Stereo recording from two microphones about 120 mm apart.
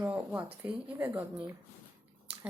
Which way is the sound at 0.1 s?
10° right (ahead or behind).